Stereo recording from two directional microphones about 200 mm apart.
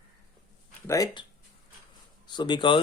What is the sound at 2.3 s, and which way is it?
Speech, 25° left (ahead or behind).